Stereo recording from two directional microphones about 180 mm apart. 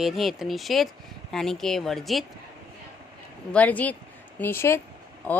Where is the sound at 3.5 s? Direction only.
10° left (ahead or behind).